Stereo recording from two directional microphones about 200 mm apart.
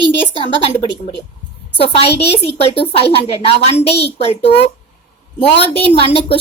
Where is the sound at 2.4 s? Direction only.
30° left (ahead or behind).